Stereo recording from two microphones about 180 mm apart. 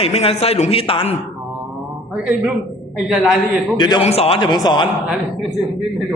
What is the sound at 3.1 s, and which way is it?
Speech, centre (ahead or behind).